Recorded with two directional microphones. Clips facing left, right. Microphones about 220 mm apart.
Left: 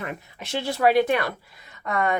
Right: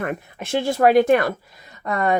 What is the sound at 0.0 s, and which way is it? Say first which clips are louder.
Speech: right 7 dB; 50° right (ahead or behind).